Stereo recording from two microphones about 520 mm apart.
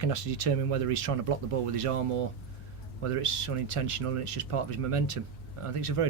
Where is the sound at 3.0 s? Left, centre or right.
Right.